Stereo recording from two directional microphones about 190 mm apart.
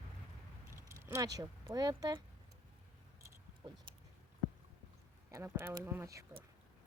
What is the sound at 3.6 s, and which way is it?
Speech, 25° right (ahead or behind).